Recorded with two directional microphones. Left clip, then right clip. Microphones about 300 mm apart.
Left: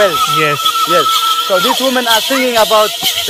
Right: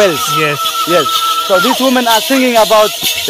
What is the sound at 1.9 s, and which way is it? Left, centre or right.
Speech, right.